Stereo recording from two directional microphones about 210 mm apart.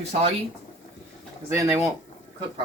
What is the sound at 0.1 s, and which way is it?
Speech, 30° right (ahead or behind).